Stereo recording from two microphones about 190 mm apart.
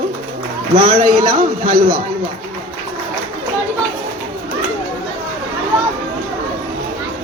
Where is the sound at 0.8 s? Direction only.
30° right (ahead or behind).